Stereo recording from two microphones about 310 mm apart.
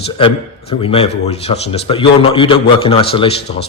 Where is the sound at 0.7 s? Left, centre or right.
Centre.